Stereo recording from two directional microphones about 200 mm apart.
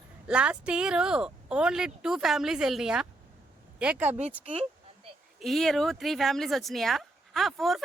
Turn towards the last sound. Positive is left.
turn(degrees=0)  # may be behind; listen again after turning